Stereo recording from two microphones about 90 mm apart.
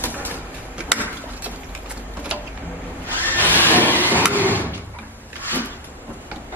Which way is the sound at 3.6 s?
20° left (ahead or behind).